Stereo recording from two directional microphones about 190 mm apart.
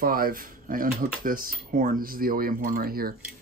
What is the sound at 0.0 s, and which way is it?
Speech, 50° right (ahead or behind).